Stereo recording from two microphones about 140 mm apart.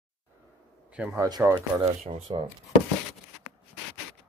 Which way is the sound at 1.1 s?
25° right (ahead or behind).